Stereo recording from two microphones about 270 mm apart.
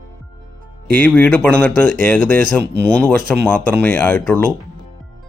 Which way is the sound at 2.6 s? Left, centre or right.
Right.